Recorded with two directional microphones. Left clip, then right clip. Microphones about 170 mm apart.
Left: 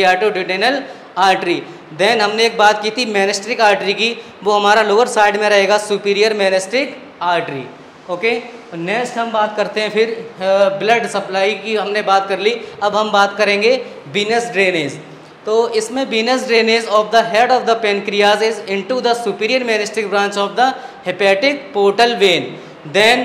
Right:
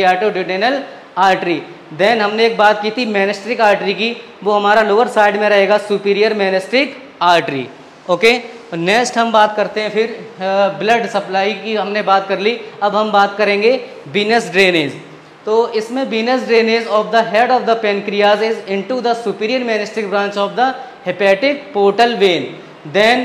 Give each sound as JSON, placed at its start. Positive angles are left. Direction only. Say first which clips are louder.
{"t": 0.0, "sound": "a man's voice", "louder": "even", "side_deg": -10}
{"t": 9.6, "sound": "a man's voice", "louder": "even", "side_deg": -10}
{"t": 15.4, "sound": "a man's voice", "louder": "even", "side_deg": -10}